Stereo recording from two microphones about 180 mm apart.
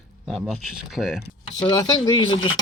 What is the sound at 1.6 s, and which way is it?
Speech, 20° left (ahead or behind).